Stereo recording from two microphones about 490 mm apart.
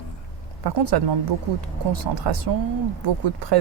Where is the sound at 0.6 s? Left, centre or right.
Right.